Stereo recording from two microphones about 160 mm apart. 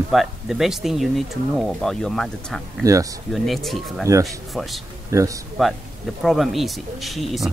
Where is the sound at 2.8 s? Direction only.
20° right (ahead or behind).